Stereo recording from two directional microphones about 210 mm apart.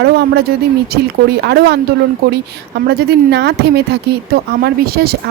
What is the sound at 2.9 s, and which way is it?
Speech, 50° right (ahead or behind).